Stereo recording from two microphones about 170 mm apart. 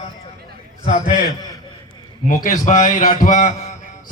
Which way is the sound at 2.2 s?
50° left (ahead or behind).